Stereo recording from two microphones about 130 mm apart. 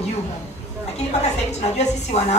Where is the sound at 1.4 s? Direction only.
60° left (ahead or behind).